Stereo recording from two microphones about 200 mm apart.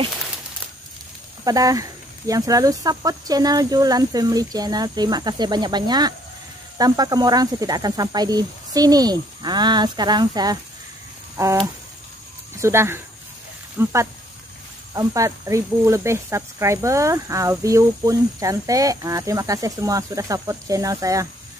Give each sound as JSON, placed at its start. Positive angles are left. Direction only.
{"t": 1.4, "sound": "speech", "side_deg": -20}
{"t": 15.0, "sound": "speech", "side_deg": -15}